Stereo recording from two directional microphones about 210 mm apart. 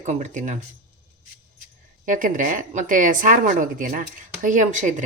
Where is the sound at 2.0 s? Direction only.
40° right (ahead or behind).